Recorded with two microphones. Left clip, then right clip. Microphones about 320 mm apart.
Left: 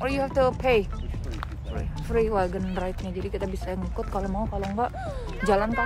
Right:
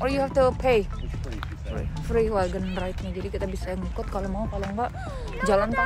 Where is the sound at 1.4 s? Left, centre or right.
Centre.